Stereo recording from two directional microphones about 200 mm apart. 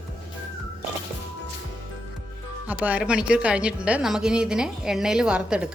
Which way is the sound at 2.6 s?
5° right (ahead or behind).